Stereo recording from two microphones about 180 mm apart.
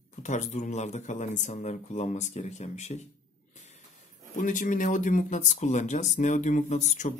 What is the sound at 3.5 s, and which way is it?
Spray, 40° left (ahead or behind).